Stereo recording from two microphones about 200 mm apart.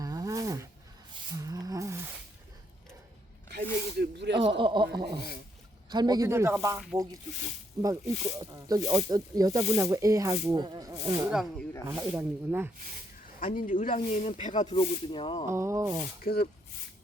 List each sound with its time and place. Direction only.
0.0 s a sound: 15° right (ahead or behind)
3.5 s snake: 55° right (ahead or behind)
4.5 s a sound: 25° right (ahead or behind)
5.9 s speech: 20° right (ahead or behind)
11.3 s speech: centre (ahead or behind)
11.9 s speech: 15° right (ahead or behind)
13.4 s speech: 40° left (ahead or behind)
14.7 s speech: 25° left (ahead or behind)
15.4 s speech: 15° right (ahead or behind)
16.2 s speech: 50° left (ahead or behind)